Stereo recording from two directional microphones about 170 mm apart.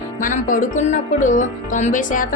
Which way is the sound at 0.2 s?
50° left (ahead or behind).